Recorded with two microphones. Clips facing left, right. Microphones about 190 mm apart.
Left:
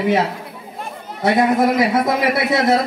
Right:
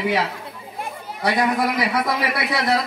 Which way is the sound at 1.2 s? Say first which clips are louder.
Left 5 dB; 25° left (ahead or behind).